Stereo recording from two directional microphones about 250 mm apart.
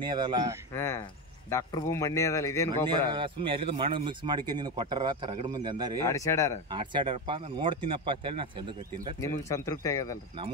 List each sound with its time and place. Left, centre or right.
0.0 s speech: centre
0.7 s speech: centre
3.1 s speech: centre
6.0 s speech: centre
6.7 s speech: centre
9.2 s speech: centre